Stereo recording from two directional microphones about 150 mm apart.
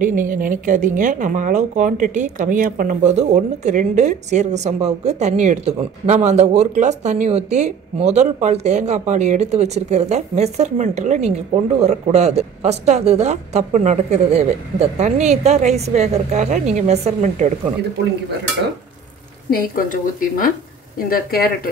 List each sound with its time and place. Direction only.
0.0 s a woman's voice: 65° right (ahead or behind)
19.5 s a woman's voice: 70° left (ahead or behind)
21.1 s speech: 80° left